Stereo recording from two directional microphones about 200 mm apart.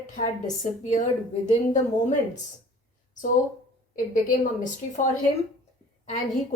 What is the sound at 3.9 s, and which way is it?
A woman's voice, 40° left (ahead or behind).